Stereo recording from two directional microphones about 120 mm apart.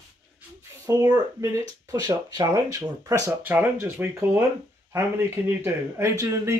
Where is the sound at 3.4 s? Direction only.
15° right (ahead or behind).